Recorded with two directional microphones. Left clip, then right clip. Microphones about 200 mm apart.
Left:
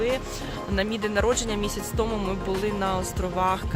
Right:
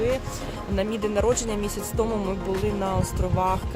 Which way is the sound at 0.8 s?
5° right (ahead or behind).